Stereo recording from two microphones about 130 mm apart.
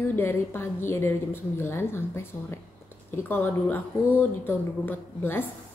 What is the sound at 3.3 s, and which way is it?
A woman's voice, 15° left (ahead or behind).